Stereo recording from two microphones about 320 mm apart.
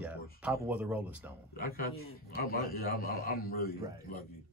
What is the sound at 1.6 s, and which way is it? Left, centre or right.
A man's voice, left.